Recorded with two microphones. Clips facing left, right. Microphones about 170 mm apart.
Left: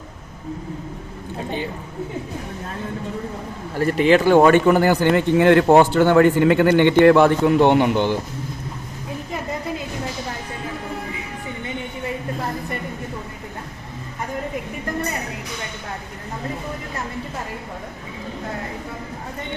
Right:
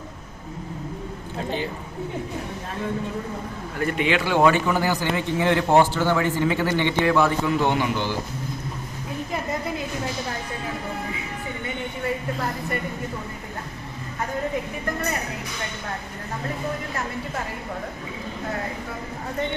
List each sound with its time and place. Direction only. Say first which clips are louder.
3.8 s speech: left 7 dB; 35° left (ahead or behind); by 8.2 s 55° left (ahead or behind)